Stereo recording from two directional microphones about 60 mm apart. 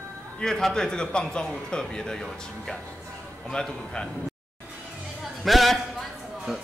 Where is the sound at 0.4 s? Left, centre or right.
Centre.